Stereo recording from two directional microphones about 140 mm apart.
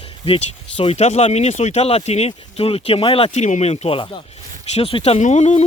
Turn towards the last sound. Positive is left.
turn(degrees=50)  # may be behind; listen again after turning